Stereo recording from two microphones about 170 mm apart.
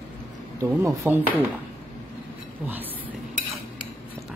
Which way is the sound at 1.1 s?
10° right (ahead or behind).